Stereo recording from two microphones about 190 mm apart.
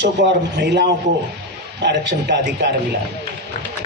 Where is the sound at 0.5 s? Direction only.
60° right (ahead or behind).